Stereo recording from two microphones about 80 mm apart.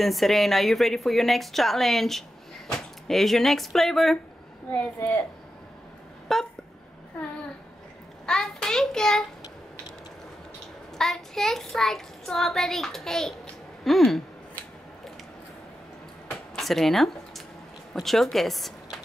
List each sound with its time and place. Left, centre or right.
0.0 s a child's voice: centre
4.9 s speech: left
6.3 s a child's voice: centre
8.3 s child singing: centre
11.0 s a child's voice: centre
16.5 s a woman's voice: centre